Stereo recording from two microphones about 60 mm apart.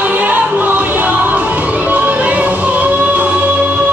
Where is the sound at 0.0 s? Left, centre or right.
Right.